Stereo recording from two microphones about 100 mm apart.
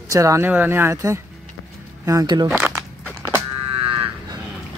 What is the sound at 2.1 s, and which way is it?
Speech, 40° right (ahead or behind).